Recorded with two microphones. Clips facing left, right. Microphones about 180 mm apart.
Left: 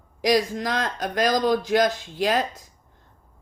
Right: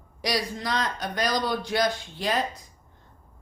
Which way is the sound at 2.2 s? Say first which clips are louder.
Left 4 dB; 90° left.